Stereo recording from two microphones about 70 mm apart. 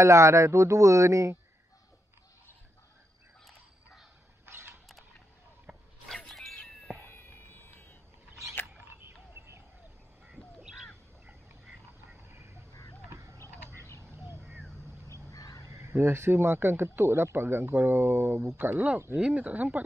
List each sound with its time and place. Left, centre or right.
0.0 s speech: right
4.5 s a sound: right
5.7 s a sound: centre
6.0 s music: centre
7.0 s a sound: left
8.3 s single-lens reflex camera: right
8.7 s frog: right
12.3 s a sound: right
15.3 s crow: left
15.6 s a man's voice: right
18.6 s speech: right
19.1 s speech: centre